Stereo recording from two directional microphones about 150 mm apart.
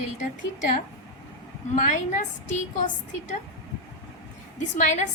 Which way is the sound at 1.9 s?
55° left (ahead or behind).